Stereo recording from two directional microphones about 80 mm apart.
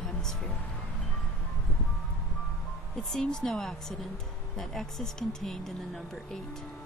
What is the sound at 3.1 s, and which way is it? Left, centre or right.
Speech, centre.